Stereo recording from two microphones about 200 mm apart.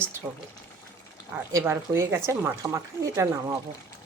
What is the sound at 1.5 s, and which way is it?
Speech, 15° right (ahead or behind).